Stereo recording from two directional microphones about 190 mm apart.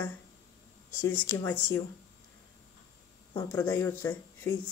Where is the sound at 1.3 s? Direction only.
10° left (ahead or behind).